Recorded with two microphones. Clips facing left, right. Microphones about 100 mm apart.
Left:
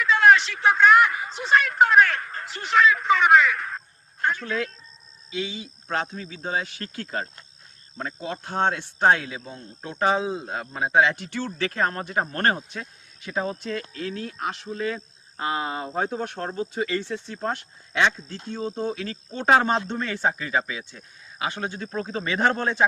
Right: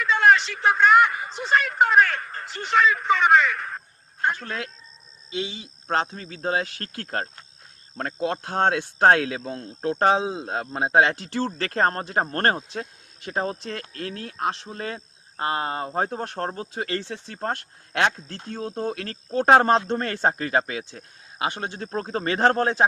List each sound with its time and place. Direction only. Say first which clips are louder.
0.0 s speech: left 1 dB; centre (ahead or behind)
4.3 s speech: left 2 dB; 40° right (ahead or behind)
5.9 s speech: right 3 dB; 40° right (ahead or behind); by 9.6 s 80° right
9.8 s speech: right 3 dB; 45° right (ahead or behind)
10.2 s speech: even; 25° right (ahead or behind)
10.8 s speech: right 1 dB; 45° right (ahead or behind)
16.8 s speech: even; 60° right (ahead or behind)
21.6 s speech: even; 40° right (ahead or behind)